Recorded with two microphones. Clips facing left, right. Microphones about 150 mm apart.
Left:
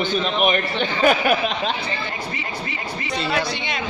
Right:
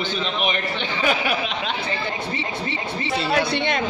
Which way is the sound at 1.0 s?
50° left (ahead or behind).